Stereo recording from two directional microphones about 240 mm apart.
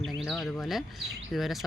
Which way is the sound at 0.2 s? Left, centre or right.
Centre.